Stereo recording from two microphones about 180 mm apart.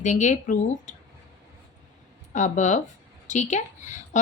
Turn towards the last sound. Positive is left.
turn(degrees=40)  # may be behind; listen again after turning